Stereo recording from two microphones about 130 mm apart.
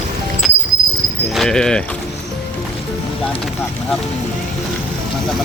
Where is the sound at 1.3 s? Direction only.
5° left (ahead or behind).